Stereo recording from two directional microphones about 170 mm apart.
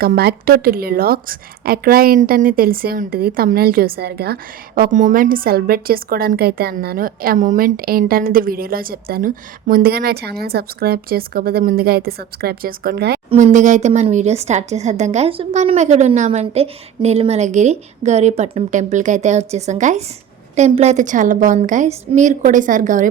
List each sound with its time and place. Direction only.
0.0 s a woman's voice: 65° right (ahead or behind)
13.3 s speech: 45° right (ahead or behind)